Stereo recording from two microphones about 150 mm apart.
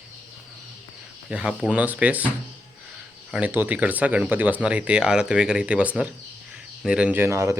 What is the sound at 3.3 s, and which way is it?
Speech, 10° right (ahead or behind).